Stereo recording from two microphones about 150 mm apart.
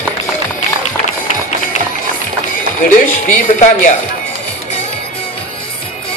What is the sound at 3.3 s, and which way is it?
Speech, 55° left (ahead or behind).